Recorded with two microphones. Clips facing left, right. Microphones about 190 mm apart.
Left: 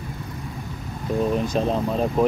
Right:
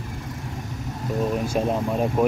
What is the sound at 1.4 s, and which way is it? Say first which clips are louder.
Speech: left 1 dB; 10° right (ahead or behind).